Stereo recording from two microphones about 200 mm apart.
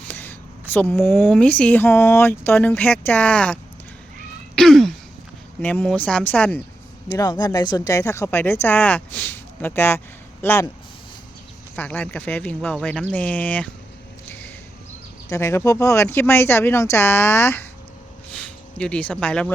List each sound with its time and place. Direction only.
0.1 s a sound: 10° left (ahead or behind)
1.0 s speech: 10° left (ahead or behind)
4.5 s throat clearing: centre (ahead or behind)
5.6 s speech: 5° left (ahead or behind)
7.1 s speech: 20° left (ahead or behind)
11.8 s speech: 5° left (ahead or behind)
15.3 s speech: 15° left (ahead or behind)
18.3 s a sound: 5° left (ahead or behind)